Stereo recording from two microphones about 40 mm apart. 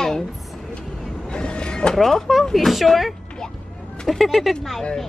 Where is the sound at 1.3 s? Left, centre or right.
Left.